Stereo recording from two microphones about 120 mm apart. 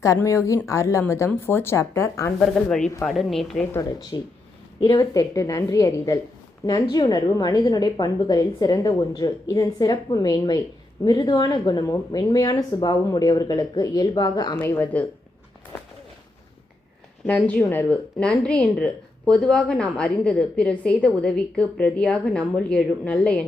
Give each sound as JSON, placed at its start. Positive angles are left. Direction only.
{"t": 0.3, "sound": "a woman's voice", "side_deg": 25}
{"t": 2.4, "sound": "a woman's voice", "side_deg": 5}
{"t": 4.1, "sound": "a woman's voice", "side_deg": 30}
{"t": 14.6, "sound": "speech", "side_deg": 15}
{"t": 17.2, "sound": "speech", "side_deg": 10}